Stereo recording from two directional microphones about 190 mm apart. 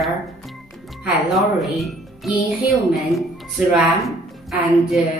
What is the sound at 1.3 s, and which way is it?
A woman's voice, centre (ahead or behind).